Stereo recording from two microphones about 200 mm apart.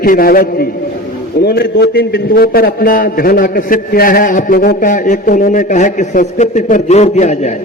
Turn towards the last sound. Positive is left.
turn(degrees=35)  # may be behind; listen again after turning